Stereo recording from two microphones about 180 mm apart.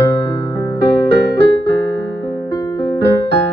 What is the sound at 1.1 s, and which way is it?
Music, 70° right (ahead or behind).